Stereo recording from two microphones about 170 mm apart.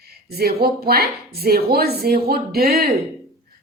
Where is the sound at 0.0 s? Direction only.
65° right (ahead or behind).